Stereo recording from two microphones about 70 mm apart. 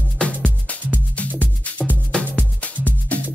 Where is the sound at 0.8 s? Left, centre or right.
Right.